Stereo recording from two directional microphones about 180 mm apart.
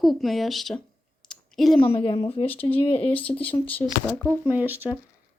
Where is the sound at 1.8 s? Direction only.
30° left (ahead or behind).